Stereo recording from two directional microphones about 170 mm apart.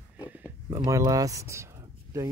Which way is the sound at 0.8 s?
20° right (ahead or behind).